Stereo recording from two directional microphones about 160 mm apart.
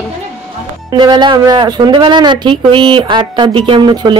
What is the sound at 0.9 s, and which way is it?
Speech, 25° right (ahead or behind).